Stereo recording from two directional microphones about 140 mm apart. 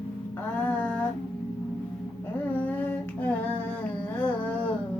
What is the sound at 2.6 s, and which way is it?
Humming, 10° left (ahead or behind).